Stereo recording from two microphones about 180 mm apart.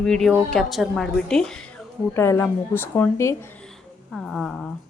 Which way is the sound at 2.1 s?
15° left (ahead or behind).